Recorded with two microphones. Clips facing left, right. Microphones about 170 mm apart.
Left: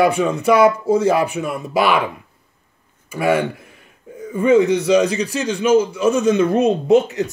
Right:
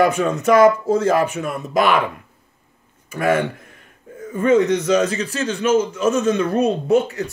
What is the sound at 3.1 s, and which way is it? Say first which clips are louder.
Speech: left 1 dB; 10° left (ahead or behind).